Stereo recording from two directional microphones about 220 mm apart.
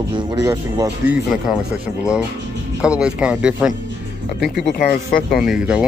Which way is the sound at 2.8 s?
5° right (ahead or behind).